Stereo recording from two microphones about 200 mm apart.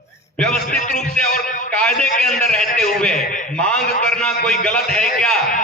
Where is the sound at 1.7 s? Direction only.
5° left (ahead or behind).